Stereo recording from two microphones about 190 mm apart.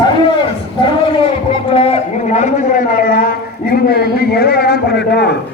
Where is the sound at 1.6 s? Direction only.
30° left (ahead or behind).